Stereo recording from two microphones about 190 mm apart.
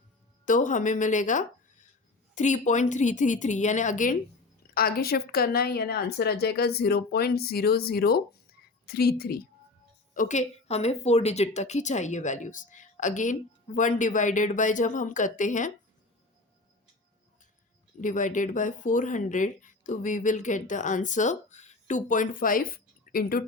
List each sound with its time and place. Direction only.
0.4 s speech: 40° left (ahead or behind)
10.2 s speech: 40° left (ahead or behind)
18.0 s speech: 40° left (ahead or behind)